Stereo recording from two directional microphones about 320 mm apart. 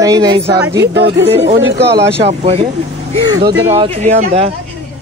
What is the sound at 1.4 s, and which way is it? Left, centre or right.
Speech, right.